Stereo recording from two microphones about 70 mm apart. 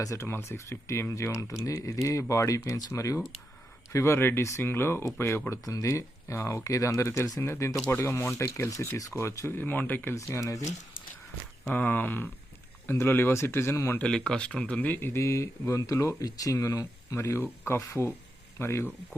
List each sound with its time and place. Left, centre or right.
0.0 s speech: left
0.3 s speech: left
5.5 s speech: left
7.9 s speech: left
9.5 s speech: left
10.2 s speech: left
11.7 s speech: left
14.0 s speech: centre; by 18.9 s left